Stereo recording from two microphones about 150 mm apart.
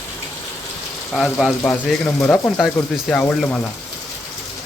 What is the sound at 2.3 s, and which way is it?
Speech, 5° left (ahead or behind).